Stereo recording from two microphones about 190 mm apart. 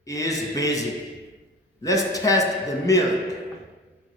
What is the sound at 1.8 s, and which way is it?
A man's voice, 20° left (ahead or behind).